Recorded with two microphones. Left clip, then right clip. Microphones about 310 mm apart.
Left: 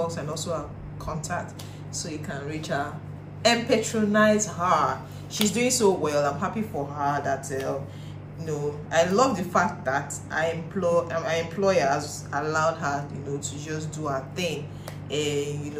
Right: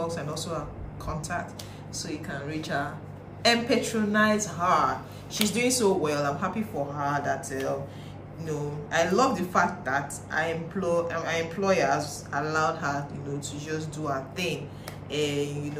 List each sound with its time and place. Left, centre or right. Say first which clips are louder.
0.0 s a man's voice: left 2 dB; centre